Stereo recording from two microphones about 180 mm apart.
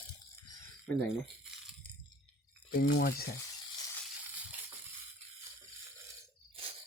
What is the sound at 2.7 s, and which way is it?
Speech, 65° left (ahead or behind).